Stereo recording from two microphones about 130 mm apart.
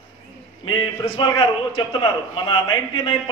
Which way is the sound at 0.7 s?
35° left (ahead or behind).